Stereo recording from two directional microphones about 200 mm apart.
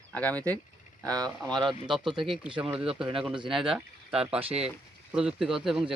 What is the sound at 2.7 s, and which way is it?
Speech, 25° right (ahead or behind).